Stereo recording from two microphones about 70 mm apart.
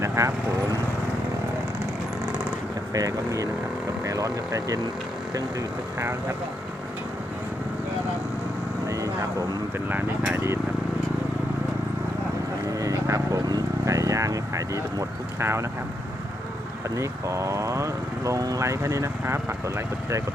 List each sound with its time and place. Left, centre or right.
0.0 s vehicle: right
2.9 s speech: right
8.9 s vehicle: right
10.3 s speech: right
12.7 s vehicle: right
16.9 s speech: right
18.6 s speech: right